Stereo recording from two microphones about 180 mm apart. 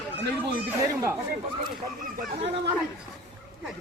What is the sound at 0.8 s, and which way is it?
Moo, 15° right (ahead or behind).